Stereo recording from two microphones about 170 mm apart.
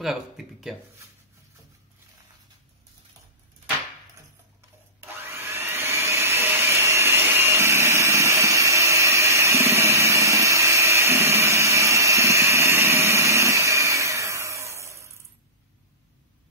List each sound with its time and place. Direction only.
0.0 s speech: centre (ahead or behind)
5.0 s vacuum cleaner: 10° right (ahead or behind)